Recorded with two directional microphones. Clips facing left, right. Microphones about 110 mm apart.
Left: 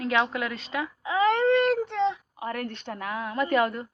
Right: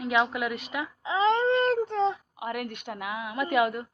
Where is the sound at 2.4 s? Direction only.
10° right (ahead or behind).